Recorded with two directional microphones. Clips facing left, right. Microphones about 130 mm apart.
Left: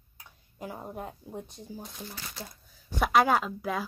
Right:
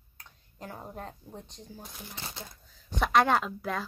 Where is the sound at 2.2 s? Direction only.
25° right (ahead or behind).